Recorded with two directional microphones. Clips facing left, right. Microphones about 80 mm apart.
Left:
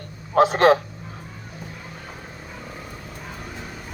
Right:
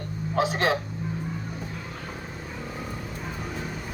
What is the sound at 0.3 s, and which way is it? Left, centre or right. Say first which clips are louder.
Speech: left 9 dB; left.